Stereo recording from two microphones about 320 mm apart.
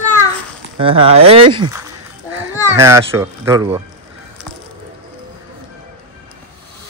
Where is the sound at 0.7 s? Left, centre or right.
Centre.